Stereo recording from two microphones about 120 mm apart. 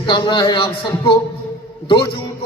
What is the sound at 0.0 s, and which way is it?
Speech, 40° left (ahead or behind).